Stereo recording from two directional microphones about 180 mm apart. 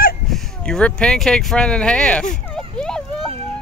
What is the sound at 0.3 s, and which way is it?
Speech, 5° left (ahead or behind).